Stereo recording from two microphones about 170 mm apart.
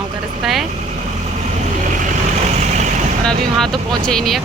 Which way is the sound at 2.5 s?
45° right (ahead or behind).